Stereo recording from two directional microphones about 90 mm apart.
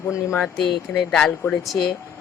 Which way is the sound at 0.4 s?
Centre (ahead or behind).